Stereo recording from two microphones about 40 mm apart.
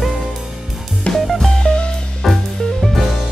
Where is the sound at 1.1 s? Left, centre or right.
Centre.